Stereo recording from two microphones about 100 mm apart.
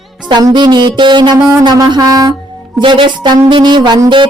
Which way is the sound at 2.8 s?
55° right (ahead or behind).